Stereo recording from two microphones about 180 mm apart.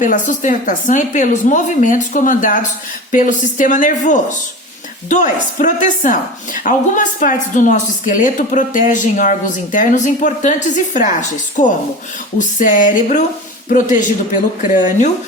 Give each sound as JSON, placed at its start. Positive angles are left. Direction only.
{"t": 0.0, "sound": "a woman's voice", "side_deg": 45}